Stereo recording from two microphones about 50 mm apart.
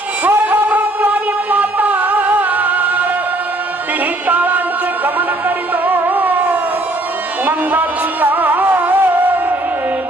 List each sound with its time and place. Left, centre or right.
0.3 s music: right
4.3 s music: right
5.7 s music: right